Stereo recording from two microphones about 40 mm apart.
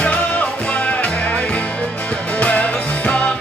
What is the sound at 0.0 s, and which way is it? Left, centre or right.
Music, left.